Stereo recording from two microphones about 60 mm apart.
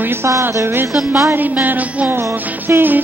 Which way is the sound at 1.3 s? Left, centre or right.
Right.